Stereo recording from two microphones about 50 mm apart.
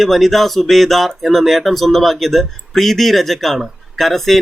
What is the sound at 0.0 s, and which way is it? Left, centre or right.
Speech, centre.